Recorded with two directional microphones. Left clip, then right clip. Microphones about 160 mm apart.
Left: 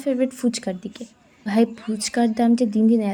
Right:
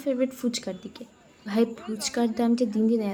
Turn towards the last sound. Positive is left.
turn(degrees=20)  # may be behind; listen again after turning